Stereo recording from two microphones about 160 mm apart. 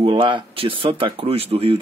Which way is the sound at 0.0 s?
30° right (ahead or behind).